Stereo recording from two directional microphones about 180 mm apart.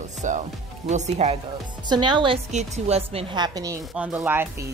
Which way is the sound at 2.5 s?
35° right (ahead or behind).